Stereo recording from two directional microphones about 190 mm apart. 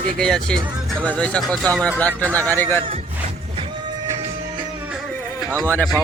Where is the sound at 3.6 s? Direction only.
25° right (ahead or behind).